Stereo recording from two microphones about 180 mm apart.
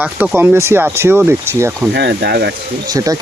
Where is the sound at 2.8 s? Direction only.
20° right (ahead or behind).